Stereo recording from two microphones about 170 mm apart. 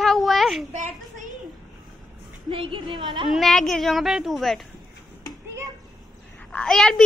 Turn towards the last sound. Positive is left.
turn(degrees=5)  # may be behind; listen again after turning